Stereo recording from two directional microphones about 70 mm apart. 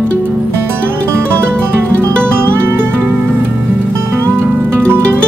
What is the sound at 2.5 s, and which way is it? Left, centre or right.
Music, right.